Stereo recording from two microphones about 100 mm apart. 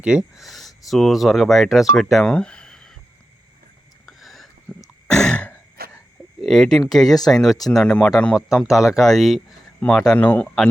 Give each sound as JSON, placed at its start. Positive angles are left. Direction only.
{"t": 0.0, "sound": "speech", "side_deg": -10}
{"t": 2.3, "sound": "a sound", "side_deg": 10}
{"t": 4.0, "sound": "a sound", "side_deg": 0}
{"t": 4.7, "sound": "cough", "side_deg": 15}
{"t": 5.1, "sound": "throat clearing", "side_deg": 10}
{"t": 6.4, "sound": "speech", "side_deg": 5}
{"t": 8.6, "sound": "speech", "side_deg": -5}